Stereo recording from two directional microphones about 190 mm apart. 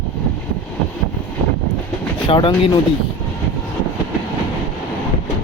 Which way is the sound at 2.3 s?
25° left (ahead or behind).